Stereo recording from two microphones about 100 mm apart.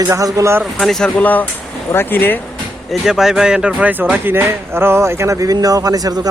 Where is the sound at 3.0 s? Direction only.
5° right (ahead or behind).